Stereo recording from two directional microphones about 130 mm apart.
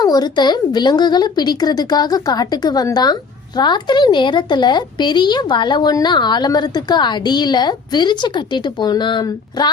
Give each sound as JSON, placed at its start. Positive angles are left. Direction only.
{"t": 0.0, "sound": "speech", "side_deg": 30}